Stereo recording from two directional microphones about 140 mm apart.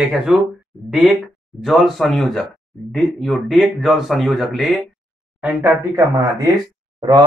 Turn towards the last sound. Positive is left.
turn(degrees=-30)  # may be behind; listen again after turning